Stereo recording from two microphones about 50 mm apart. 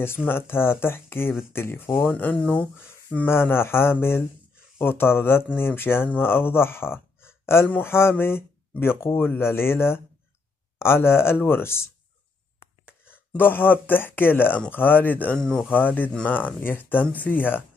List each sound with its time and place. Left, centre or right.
0.3 s speech: left
2.4 s speech: left
3.3 s speech: left
13.4 s speech: left
15.3 s speech: centre
15.7 s speech: left